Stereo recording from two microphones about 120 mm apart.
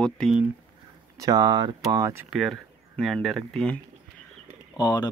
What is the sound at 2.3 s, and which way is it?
Speech, 5° right (ahead or behind).